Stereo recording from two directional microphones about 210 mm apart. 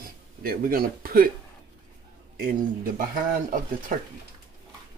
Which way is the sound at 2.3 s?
40° right (ahead or behind).